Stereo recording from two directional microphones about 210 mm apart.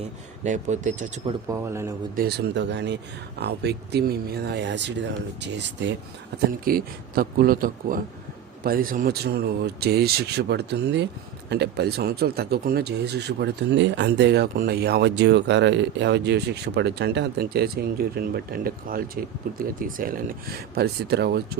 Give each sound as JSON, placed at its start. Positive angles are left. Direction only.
{"t": 0.4, "sound": "speech", "side_deg": -35}
{"t": 1.2, "sound": "speech", "side_deg": -15}
{"t": 2.1, "sound": "speech", "side_deg": -50}
{"t": 6.7, "sound": "speech", "side_deg": -45}